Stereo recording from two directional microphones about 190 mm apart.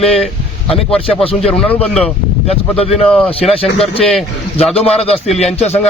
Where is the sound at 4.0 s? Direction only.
Centre (ahead or behind).